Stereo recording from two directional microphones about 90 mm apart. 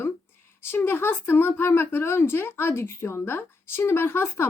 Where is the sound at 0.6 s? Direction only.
25° left (ahead or behind).